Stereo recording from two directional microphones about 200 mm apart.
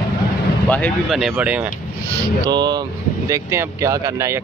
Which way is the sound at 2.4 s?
20° right (ahead or behind).